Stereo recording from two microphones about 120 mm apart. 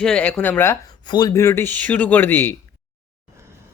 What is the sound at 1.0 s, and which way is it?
Speech, 35° left (ahead or behind).